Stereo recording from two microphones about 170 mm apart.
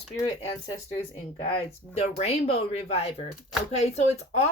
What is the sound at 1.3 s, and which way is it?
A woman's voice, 30° left (ahead or behind).